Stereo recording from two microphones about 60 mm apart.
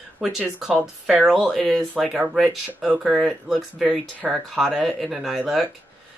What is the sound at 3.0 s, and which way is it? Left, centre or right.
Speech, centre.